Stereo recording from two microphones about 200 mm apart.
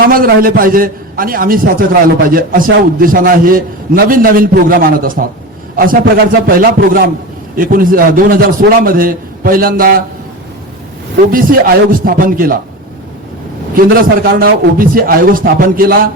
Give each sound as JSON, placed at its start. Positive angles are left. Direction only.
{"t": 0.1, "sound": "a man's voice", "side_deg": -45}
{"t": 11.3, "sound": "a man's voice", "side_deg": -45}
{"t": 13.7, "sound": "a man's voice", "side_deg": -50}